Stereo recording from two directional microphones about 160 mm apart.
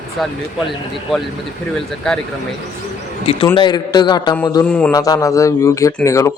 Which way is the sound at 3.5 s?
25° left (ahead or behind).